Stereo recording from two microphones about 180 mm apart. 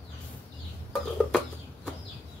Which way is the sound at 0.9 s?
Centre (ahead or behind).